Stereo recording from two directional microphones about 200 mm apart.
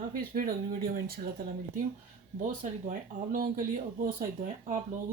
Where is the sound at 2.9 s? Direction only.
45° right (ahead or behind).